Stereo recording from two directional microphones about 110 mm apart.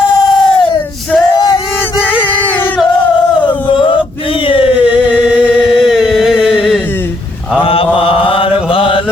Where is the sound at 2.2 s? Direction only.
15° left (ahead or behind).